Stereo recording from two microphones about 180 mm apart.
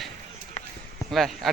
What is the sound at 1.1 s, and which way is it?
Speech, centre (ahead or behind).